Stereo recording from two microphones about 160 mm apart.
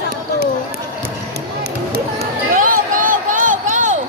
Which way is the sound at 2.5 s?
55° right (ahead or behind).